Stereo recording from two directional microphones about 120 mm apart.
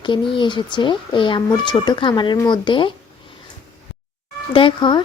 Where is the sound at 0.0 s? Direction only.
40° left (ahead or behind).